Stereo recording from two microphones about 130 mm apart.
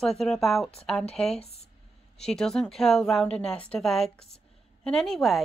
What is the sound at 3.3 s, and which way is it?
Speech, 50° left (ahead or behind).